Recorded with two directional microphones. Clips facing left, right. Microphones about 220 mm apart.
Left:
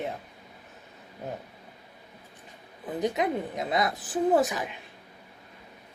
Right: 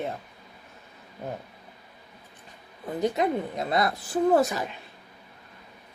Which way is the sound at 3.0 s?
15° left (ahead or behind).